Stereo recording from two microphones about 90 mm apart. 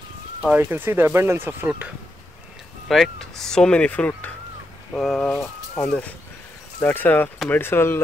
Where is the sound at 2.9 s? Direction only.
Centre (ahead or behind).